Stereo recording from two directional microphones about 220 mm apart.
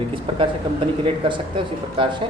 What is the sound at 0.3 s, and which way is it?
Speech, 20° right (ahead or behind).